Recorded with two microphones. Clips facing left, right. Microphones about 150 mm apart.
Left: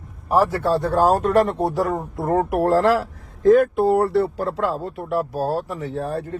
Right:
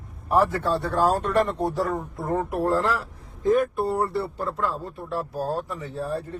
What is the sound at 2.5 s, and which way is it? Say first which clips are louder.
Speech: left 7 dB; 90° left.